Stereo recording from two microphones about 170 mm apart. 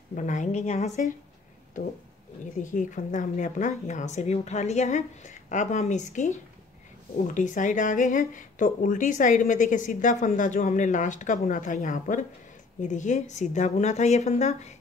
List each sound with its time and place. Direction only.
0.1 s speech: 45° left (ahead or behind)
2.6 s speech: 45° left (ahead or behind)